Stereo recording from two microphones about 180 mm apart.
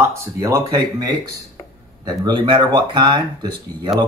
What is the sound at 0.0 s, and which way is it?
Speech, 15° right (ahead or behind).